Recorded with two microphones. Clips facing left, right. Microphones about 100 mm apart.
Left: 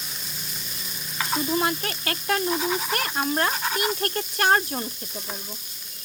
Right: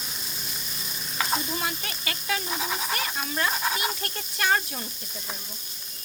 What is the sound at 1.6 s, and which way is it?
Speech, 50° left (ahead or behind).